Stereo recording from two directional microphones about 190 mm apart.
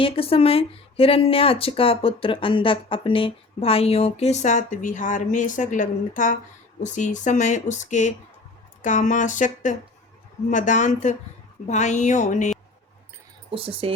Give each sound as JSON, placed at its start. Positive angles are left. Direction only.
{"t": 0.0, "sound": "speech", "side_deg": 30}
{"t": 13.5, "sound": "speech", "side_deg": -30}